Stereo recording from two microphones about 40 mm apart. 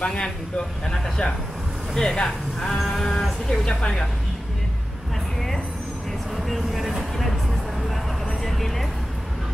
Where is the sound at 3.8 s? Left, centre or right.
Centre.